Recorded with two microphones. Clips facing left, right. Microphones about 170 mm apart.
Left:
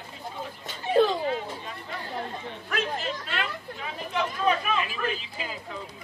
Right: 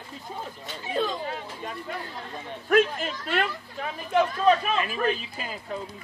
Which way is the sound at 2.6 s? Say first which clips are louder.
Right 9 dB; 50° right (ahead or behind).